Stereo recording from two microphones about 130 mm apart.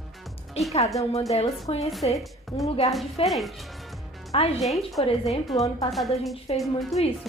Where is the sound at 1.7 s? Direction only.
45° left (ahead or behind).